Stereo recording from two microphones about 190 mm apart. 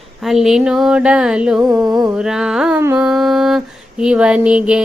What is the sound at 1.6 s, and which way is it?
Mantra, 20° right (ahead or behind).